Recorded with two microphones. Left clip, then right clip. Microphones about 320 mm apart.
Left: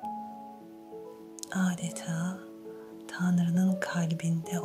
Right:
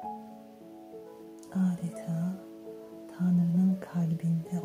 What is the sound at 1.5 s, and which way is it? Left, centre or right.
Speech, left.